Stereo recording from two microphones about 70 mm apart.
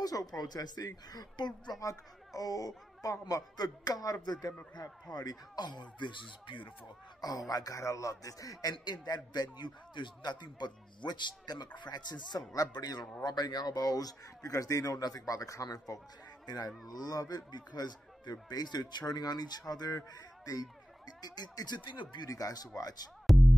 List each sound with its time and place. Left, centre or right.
0.0 s a man's voice: left
1.8 s speech: left
7.2 s speech: left
8.7 s a man's voice: left
10.2 s a man's voice: left
12.7 s a man's voice: left
13.2 s speech: left
16.4 s a man's voice: left
21.2 s a man's voice: left
22.3 s speech: left
23.3 s music: centre